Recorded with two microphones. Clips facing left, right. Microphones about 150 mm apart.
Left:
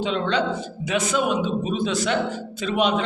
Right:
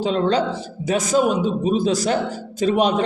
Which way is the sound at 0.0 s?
35° right (ahead or behind).